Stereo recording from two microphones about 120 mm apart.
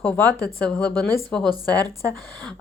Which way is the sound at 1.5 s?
35° right (ahead or behind).